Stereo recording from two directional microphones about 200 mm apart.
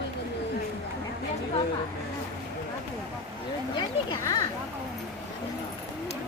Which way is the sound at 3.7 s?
20° left (ahead or behind).